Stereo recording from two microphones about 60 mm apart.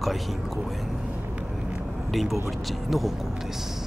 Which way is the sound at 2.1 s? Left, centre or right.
Centre.